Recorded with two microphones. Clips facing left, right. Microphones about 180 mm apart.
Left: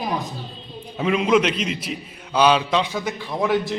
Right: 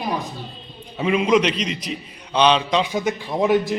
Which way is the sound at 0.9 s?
Centre (ahead or behind).